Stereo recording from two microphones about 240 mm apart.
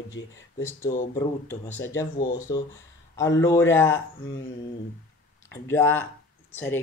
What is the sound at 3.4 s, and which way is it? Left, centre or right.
Speech, centre.